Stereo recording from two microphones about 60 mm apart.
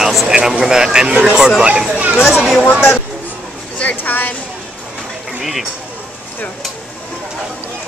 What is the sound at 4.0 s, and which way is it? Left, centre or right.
Speech, left.